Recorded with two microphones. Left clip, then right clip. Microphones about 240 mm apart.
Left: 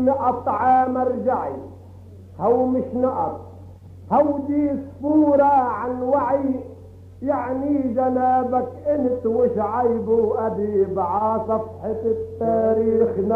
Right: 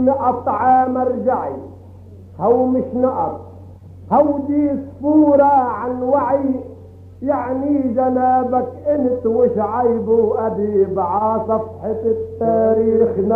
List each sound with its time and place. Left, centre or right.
0.0 s speech: left
4.1 s male singing: left